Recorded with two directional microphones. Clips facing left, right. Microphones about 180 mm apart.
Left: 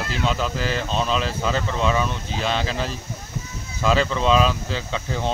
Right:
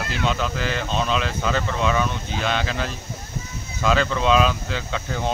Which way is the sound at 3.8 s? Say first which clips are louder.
Even; centre (ahead or behind).